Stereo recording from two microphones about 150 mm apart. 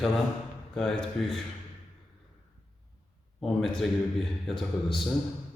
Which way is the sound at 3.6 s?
Centre (ahead or behind).